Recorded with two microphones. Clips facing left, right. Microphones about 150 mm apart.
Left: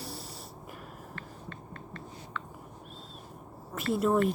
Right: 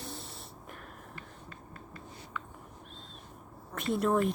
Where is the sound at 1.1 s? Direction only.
5° right (ahead or behind).